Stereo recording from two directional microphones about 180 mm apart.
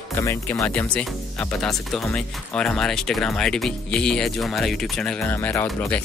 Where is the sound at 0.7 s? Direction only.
5° left (ahead or behind).